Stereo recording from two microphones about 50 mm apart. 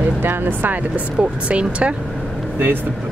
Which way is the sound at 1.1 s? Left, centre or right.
Right.